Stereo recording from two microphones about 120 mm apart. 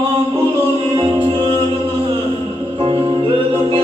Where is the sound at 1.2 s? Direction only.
45° right (ahead or behind).